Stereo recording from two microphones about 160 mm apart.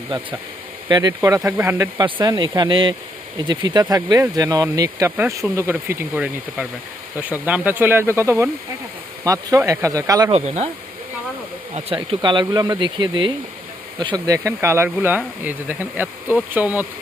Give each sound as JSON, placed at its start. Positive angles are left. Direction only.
{"t": 0.9, "sound": "speech", "side_deg": -25}
{"t": 2.2, "sound": "speech", "side_deg": -25}
{"t": 10.3, "sound": "speech", "side_deg": -45}
{"t": 11.9, "sound": "speech", "side_deg": -30}